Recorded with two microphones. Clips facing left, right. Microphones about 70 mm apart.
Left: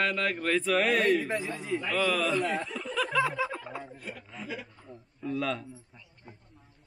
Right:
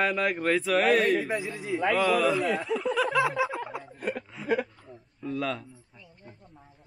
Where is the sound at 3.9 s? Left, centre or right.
Right.